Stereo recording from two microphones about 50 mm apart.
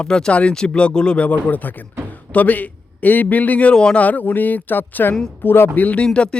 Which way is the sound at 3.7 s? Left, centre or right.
Centre.